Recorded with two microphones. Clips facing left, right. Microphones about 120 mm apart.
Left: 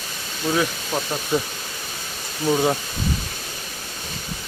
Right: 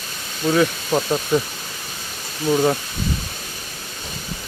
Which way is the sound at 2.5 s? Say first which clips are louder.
Right 2 dB; 5° left (ahead or behind).